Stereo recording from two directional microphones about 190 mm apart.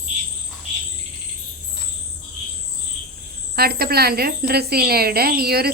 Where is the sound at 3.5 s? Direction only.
55° right (ahead or behind).